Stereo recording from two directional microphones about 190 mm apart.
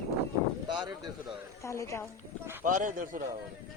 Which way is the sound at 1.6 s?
15° left (ahead or behind).